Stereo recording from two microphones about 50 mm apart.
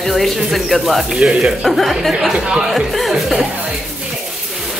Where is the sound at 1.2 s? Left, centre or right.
Centre.